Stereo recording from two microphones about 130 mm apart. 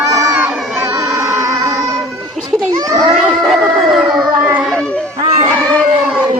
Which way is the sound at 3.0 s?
Centre (ahead or behind).